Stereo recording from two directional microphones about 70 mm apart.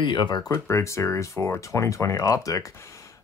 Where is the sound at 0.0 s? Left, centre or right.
Left.